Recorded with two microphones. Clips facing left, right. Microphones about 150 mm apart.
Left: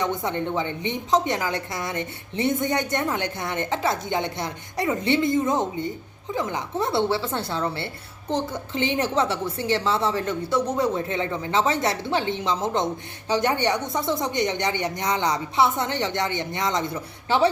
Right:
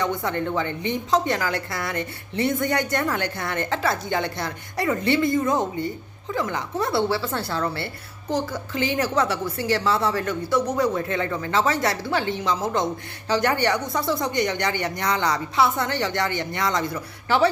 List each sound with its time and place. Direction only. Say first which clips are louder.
0.0 s a woman's voice: right 1 dB; 20° left (ahead or behind)